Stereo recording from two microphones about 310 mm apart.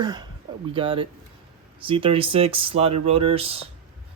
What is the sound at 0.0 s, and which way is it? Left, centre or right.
Speech, centre.